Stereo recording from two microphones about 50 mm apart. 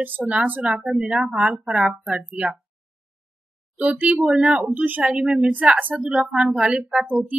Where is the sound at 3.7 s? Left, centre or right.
Right.